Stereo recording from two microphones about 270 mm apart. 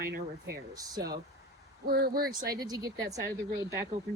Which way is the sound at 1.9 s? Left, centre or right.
Right.